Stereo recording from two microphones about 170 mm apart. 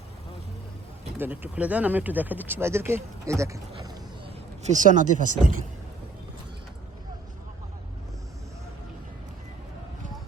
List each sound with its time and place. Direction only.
1.2 s speech: 10° right (ahead or behind)
4.7 s speech: 50° right (ahead or behind)